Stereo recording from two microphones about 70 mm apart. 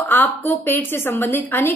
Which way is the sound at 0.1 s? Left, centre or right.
Left.